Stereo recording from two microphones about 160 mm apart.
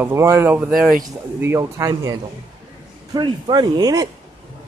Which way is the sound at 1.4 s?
20° right (ahead or behind).